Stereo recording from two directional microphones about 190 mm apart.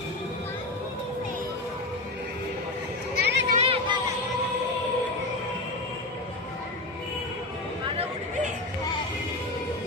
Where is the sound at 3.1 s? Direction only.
65° right (ahead or behind).